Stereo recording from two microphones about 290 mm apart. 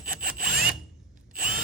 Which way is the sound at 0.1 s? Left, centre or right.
Right.